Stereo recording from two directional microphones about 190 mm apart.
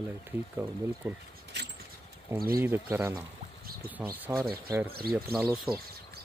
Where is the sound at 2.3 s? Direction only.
10° right (ahead or behind).